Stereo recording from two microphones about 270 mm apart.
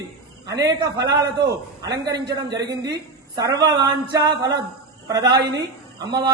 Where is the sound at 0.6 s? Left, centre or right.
Centre.